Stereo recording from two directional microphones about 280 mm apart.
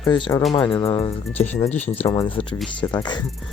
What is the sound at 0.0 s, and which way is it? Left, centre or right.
Speech, centre.